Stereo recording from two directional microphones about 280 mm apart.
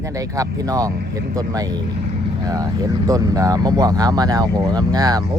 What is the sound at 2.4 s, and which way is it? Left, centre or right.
Speech, centre.